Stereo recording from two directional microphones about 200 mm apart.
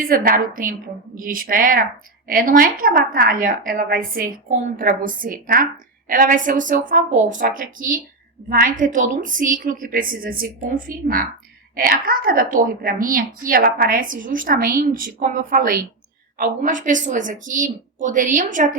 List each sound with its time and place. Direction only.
0.0 s a woman's voice: 45° right (ahead or behind)